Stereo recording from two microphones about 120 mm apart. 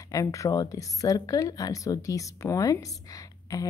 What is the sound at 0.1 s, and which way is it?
A woman's voice, 25° left (ahead or behind).